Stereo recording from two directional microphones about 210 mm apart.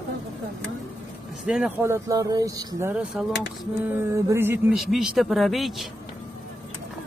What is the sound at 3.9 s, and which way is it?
Speech, 15° right (ahead or behind).